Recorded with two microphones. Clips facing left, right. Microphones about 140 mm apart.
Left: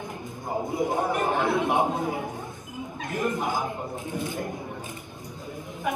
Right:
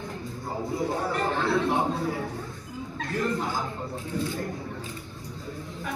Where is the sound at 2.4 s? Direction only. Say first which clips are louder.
Left 1 dB; 20° left (ahead or behind).